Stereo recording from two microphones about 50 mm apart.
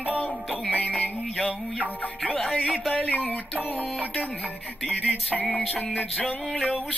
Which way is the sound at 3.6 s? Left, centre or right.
Left.